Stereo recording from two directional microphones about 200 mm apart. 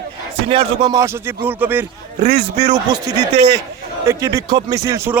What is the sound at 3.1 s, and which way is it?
Speech, 55° right (ahead or behind).